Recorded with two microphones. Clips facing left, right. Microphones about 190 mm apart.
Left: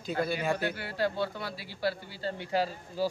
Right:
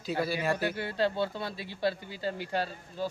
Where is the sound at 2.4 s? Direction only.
5° left (ahead or behind).